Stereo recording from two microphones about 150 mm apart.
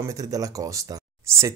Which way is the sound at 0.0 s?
25° right (ahead or behind).